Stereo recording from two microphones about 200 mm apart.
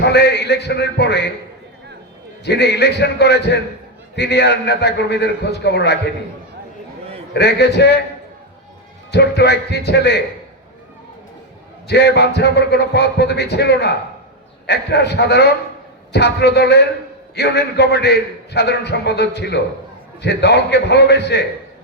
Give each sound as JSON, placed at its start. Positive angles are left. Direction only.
{"t": 0.0, "sound": "a man's voice", "side_deg": 55}
{"t": 2.4, "sound": "a man's voice", "side_deg": 60}
{"t": 7.3, "sound": "a man's voice", "side_deg": 55}
{"t": 9.1, "sound": "a man's voice", "side_deg": 55}
{"t": 11.9, "sound": "a man's voice", "side_deg": 55}